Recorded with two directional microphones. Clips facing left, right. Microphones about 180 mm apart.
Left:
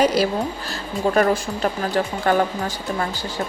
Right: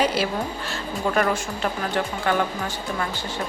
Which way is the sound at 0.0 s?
40° left (ahead or behind).